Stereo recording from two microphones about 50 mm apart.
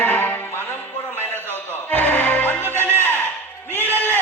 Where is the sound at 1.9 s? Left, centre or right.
Left.